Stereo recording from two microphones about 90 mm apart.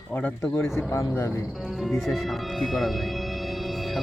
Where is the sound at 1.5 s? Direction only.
Centre (ahead or behind).